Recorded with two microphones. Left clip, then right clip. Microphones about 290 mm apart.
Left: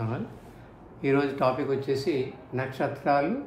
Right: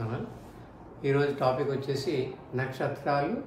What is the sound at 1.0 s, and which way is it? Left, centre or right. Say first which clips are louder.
A man's voice: left 2 dB; left.